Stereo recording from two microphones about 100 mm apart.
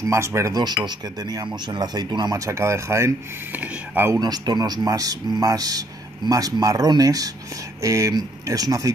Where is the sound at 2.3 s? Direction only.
30° right (ahead or behind).